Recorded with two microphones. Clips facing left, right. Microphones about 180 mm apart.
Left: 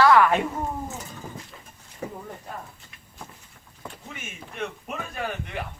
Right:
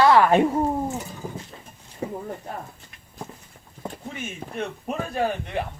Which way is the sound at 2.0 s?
30° right (ahead or behind).